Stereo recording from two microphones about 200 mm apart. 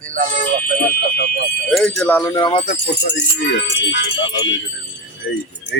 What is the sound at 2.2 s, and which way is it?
Music, 20° left (ahead or behind).